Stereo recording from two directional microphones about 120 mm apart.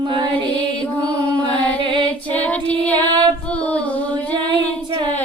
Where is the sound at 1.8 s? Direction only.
45° right (ahead or behind).